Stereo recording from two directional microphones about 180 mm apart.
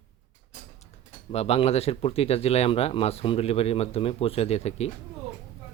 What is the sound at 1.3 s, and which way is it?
Speech, 35° left (ahead or behind).